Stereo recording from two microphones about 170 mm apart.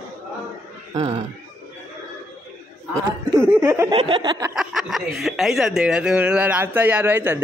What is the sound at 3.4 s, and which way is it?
Speech, 15° right (ahead or behind).